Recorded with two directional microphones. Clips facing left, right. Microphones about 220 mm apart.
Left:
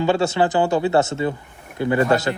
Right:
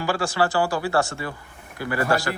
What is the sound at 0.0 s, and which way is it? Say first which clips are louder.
Speech: left 5 dB; 25° left (ahead or behind).